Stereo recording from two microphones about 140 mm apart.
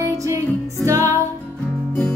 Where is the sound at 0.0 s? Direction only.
20° right (ahead or behind).